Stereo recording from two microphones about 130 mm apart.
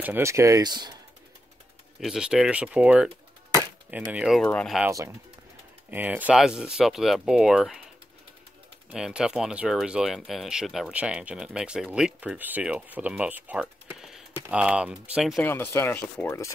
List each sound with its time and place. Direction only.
0.0 s speech: 20° right (ahead or behind)
2.0 s speech: 5° right (ahead or behind)
4.4 s speech: 5° left (ahead or behind)
5.9 s speech: 15° right (ahead or behind)
8.9 s speech: 5° right (ahead or behind)
15.4 s speech: 15° left (ahead or behind)